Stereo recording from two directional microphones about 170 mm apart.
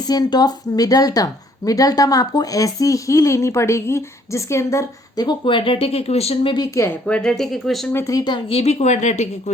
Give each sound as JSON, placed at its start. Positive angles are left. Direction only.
{"t": 0.1, "sound": "speech", "side_deg": 25}
{"t": 6.7, "sound": "speech", "side_deg": 15}
{"t": 7.2, "sound": "speech", "side_deg": 0}
{"t": 7.9, "sound": "speech", "side_deg": 20}